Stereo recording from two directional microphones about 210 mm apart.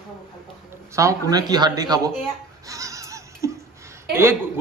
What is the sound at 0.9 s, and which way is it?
A man's voice, 15° right (ahead or behind).